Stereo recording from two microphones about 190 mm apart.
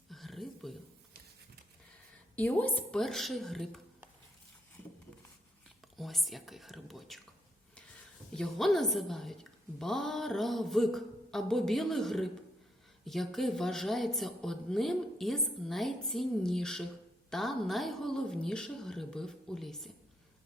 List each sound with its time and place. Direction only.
0.1 s a sound: centre (ahead or behind)
2.3 s a woman's voice: 10° left (ahead or behind)
6.0 s a woman's voice: centre (ahead or behind)
8.4 s a woman's voice: centre (ahead or behind)